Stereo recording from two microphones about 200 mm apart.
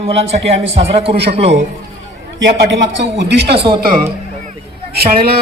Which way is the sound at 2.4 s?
65° right (ahead or behind).